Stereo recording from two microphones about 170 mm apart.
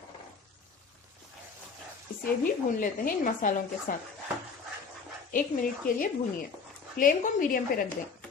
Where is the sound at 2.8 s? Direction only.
50° left (ahead or behind).